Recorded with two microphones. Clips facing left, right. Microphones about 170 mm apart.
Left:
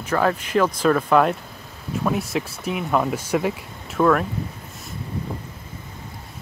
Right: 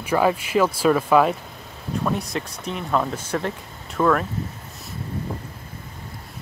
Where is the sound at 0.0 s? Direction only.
10° right (ahead or behind).